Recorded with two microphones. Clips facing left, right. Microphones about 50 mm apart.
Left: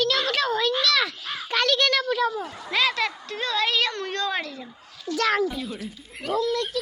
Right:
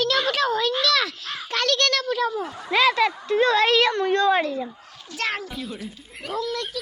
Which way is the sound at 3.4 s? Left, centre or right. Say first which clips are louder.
Right 5 dB; right.